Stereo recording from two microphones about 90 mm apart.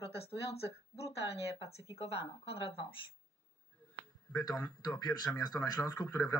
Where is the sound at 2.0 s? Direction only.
90° left.